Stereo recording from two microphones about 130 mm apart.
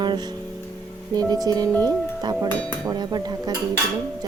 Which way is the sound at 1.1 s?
30° right (ahead or behind).